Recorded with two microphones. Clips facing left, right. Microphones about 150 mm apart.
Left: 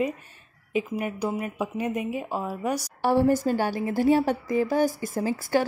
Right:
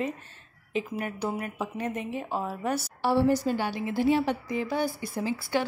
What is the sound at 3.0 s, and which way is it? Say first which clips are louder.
A woman's voice: left 3 dB; 45° left (ahead or behind).